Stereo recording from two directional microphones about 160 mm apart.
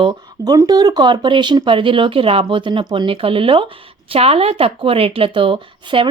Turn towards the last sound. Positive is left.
turn(degrees=-35)  # may be behind; listen again after turning